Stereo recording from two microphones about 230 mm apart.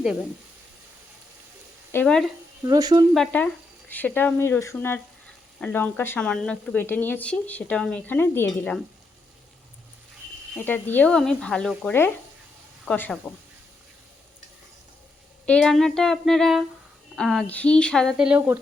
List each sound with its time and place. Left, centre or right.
0.0 s speech: centre
1.9 s speech: centre
2.6 s speech: centre
3.1 s speech: centre
10.7 s speech: centre
15.4 s speech: centre